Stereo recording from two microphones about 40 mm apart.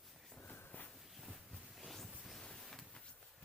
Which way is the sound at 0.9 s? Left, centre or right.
Centre.